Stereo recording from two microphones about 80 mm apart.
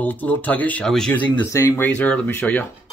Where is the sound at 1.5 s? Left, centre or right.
Left.